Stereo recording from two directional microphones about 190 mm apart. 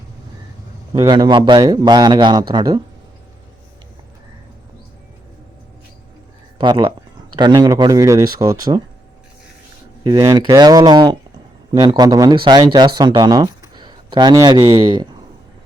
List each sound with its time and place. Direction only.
0.9 s speech: 25° right (ahead or behind)
6.6 s speech: 25° right (ahead or behind)
10.0 s speech: 20° right (ahead or behind)